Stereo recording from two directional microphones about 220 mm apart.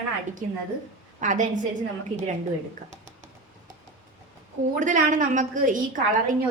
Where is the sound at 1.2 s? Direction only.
35° right (ahead or behind).